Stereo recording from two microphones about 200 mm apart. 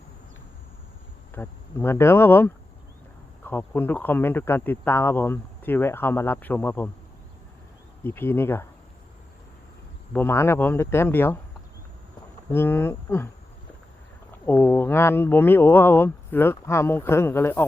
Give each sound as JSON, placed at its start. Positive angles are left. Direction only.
{"t": 1.3, "sound": "speech", "side_deg": 10}
{"t": 8.0, "sound": "speech", "side_deg": 10}
{"t": 10.1, "sound": "speech", "side_deg": 10}
{"t": 12.5, "sound": "speech", "side_deg": 10}
{"t": 14.4, "sound": "speech", "side_deg": 10}